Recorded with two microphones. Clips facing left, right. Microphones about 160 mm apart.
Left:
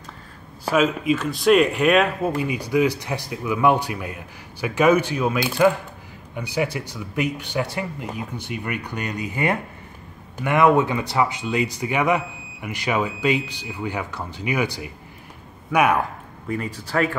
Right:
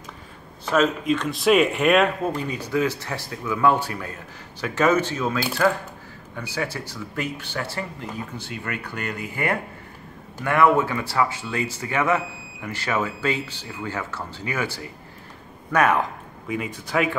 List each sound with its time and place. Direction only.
0.7 s speech: 5° left (ahead or behind)
2.3 s speech: 10° left (ahead or behind)
16.4 s a man's voice: 10° right (ahead or behind)